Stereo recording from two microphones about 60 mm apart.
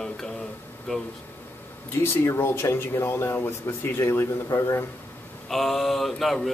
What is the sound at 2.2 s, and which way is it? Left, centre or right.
Speech, left.